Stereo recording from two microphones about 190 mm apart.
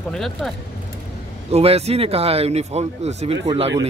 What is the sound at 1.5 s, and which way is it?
Speech, 35° right (ahead or behind).